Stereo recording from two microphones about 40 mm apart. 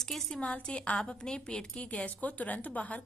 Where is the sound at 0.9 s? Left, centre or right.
Centre; by 3.0 s left.